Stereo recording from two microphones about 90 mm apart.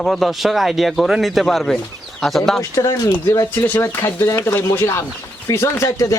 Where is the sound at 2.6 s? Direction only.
40° left (ahead or behind).